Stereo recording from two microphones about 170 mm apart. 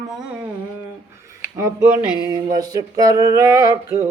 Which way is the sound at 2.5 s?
20° right (ahead or behind).